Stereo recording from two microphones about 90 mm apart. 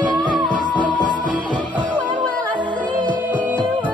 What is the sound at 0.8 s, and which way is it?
Music, 60° right (ahead or behind).